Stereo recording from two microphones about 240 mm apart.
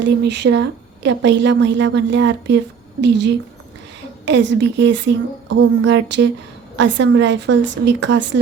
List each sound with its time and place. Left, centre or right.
0.0 s a woman's voice: right